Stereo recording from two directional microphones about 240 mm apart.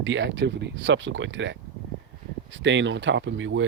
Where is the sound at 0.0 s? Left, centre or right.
Right.